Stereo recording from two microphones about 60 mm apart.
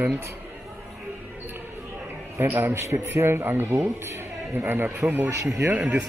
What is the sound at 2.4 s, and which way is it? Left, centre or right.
A man's voice, right.